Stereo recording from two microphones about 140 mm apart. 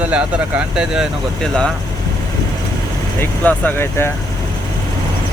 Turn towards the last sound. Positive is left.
turn(degrees=15)  # may be behind; listen again after turning